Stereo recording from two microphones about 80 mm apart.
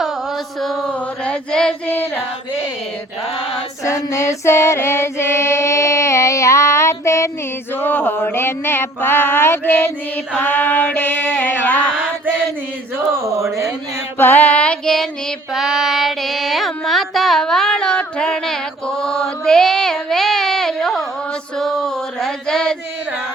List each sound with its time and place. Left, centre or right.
0.6 s a sound: centre
1.2 s female singing: centre
1.9 s female singing: left
3.8 s music: left
7.8 s a sound: left
13.1 s speech: right
14.2 s female singing: left
15.5 s carnatic music: centre
21.6 s a sound: centre